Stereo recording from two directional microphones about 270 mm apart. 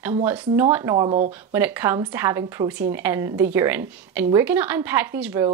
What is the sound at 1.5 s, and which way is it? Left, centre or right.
Speech, centre.